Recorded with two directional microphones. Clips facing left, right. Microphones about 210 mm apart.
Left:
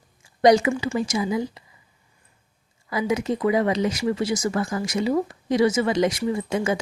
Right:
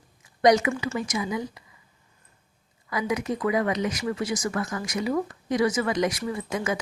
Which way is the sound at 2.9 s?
25° left (ahead or behind).